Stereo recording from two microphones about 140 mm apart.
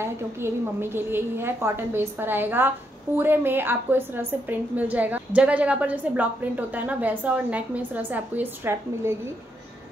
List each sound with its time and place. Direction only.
0.0 s a woman's voice: 15° right (ahead or behind)